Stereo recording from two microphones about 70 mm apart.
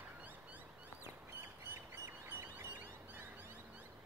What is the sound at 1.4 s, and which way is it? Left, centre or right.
Bird, right.